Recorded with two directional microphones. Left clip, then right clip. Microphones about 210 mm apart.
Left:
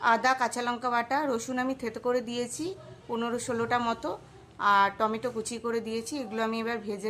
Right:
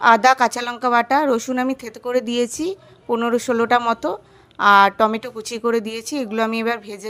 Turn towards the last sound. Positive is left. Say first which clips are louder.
# right 9 dB
turn(degrees=-40)  # may be behind; listen again after turning